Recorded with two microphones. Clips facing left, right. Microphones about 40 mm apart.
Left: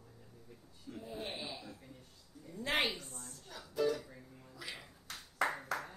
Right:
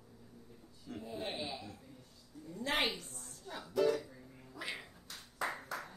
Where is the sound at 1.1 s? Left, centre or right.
Centre.